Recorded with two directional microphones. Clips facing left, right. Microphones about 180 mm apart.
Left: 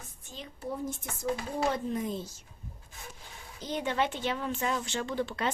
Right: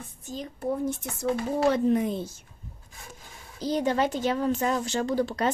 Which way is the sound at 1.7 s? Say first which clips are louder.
Right 8 dB; 65° right (ahead or behind).